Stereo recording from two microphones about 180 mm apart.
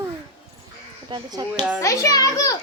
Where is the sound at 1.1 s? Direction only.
20° right (ahead or behind).